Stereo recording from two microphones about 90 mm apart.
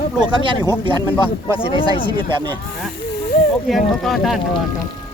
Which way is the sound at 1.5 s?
80° left.